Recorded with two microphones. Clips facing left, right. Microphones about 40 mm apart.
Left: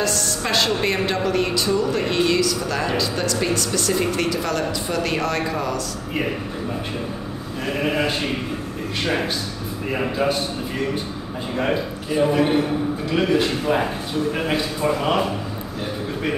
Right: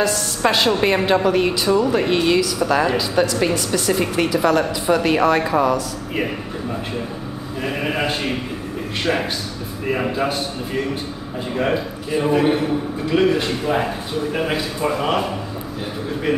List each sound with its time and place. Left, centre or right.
0.0 s a woman's voice: centre
7.6 s speech: centre
11.5 s a man's voice: centre